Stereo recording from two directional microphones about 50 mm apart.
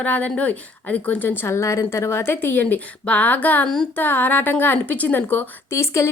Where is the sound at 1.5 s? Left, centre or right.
Left.